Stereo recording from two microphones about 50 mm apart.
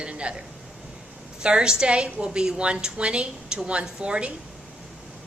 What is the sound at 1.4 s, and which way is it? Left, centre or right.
A woman's voice, centre.